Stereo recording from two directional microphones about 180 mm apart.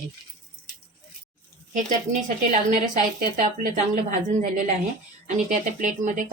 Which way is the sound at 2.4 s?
45° right (ahead or behind).